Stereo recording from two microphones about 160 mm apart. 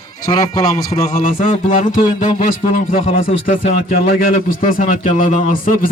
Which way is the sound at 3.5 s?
65° left (ahead or behind).